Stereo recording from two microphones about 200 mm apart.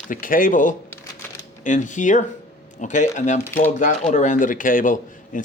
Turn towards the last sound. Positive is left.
turn(degrees=40)  # may be behind; listen again after turning